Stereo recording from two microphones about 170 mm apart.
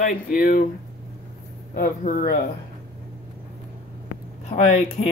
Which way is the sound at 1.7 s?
55° left (ahead or behind).